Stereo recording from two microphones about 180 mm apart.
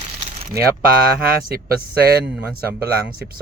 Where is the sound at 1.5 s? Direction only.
55° right (ahead or behind).